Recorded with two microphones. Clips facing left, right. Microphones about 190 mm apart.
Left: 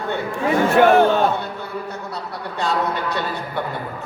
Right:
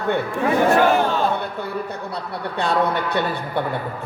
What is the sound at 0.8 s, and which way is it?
Speech, 60° left (ahead or behind).